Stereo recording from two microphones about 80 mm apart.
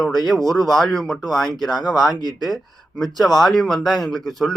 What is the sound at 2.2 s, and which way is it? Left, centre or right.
Speech, right.